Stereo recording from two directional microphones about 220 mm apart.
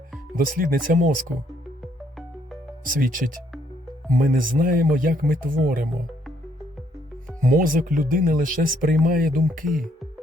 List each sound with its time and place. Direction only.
0.3 s speech: 40° right (ahead or behind)
1.8 s music: centre (ahead or behind)
2.8 s speech: 40° right (ahead or behind)
7.4 s speech: 40° right (ahead or behind)